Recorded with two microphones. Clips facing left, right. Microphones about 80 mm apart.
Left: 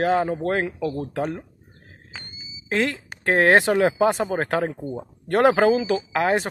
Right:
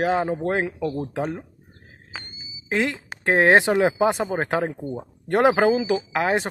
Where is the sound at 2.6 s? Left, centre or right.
Centre.